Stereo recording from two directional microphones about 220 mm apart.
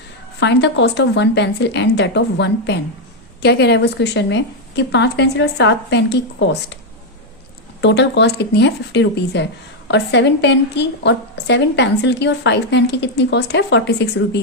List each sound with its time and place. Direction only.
0.3 s a woman's voice: 50° left (ahead or behind)
7.8 s a woman's voice: 50° left (ahead or behind)